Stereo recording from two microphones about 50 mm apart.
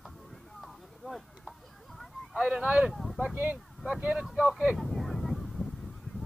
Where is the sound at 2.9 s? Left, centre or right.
Centre.